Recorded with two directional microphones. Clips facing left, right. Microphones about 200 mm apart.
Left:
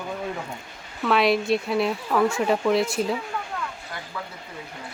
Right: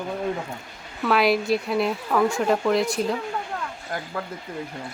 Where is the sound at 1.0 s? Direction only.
Centre (ahead or behind).